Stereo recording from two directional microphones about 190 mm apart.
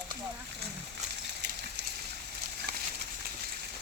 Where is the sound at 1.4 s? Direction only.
65° right (ahead or behind).